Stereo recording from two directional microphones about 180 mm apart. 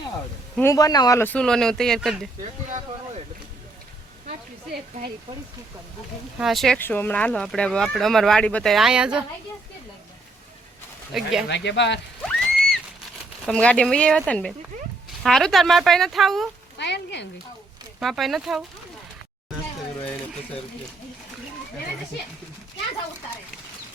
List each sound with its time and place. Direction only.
0.6 s speech: 20° left (ahead or behind); by 2.3 s centre (ahead or behind)
6.4 s speech: centre (ahead or behind)
6.7 s speech: 10° left (ahead or behind); by 9.2 s 5° right (ahead or behind)
11.1 s speech: centre (ahead or behind)
11.4 s frying: 75° left (ahead or behind)
12.2 s a sound: 5° left (ahead or behind)
13.4 s speech: 5° left (ahead or behind)
16.7 s frying: 75° left (ahead or behind)
18.0 s speech: centre (ahead or behind)